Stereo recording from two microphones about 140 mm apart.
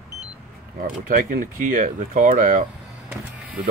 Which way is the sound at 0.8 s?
90° right.